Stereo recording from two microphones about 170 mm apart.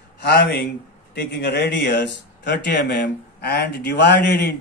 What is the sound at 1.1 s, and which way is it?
A man's voice, 85° left.